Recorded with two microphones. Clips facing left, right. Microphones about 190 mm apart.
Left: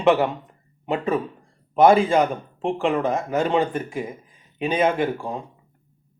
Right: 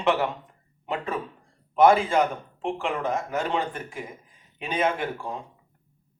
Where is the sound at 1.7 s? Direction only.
15° left (ahead or behind).